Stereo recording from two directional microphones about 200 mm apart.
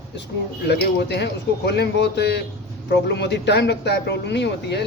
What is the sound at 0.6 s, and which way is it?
A man's voice, 55° left (ahead or behind).